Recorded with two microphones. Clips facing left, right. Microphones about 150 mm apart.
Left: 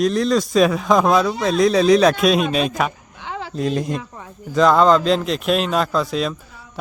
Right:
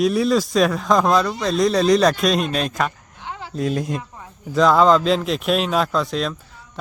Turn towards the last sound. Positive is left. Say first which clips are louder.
# left 1 dB
turn(degrees=5)  # may be behind; listen again after turning